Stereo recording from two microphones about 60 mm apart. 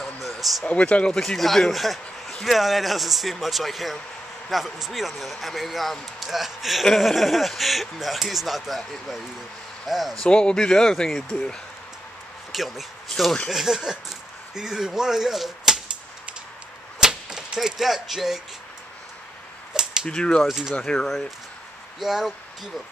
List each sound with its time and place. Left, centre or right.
0.0 s a sound: centre
0.7 s speech: left
1.2 s speech: centre
10.2 s speech: centre
12.5 s speech: centre
17.0 s a sound: centre
19.7 s typewriter: centre
20.1 s speech: centre
20.4 s speech: centre
20.7 s speech: centre
22.0 s speech: centre